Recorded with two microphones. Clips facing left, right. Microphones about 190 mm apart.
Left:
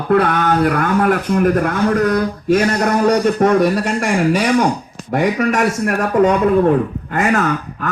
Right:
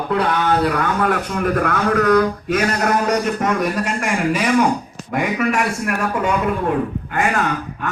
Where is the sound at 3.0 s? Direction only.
35° left (ahead or behind).